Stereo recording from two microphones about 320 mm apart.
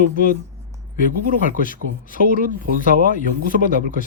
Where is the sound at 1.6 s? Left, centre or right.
Left.